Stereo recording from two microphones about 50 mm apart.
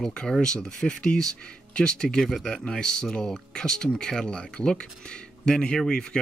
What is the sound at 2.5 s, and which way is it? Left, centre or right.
Speech, centre.